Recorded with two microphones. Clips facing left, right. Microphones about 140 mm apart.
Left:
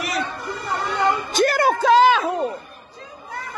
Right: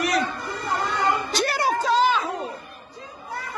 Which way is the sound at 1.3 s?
50° left (ahead or behind).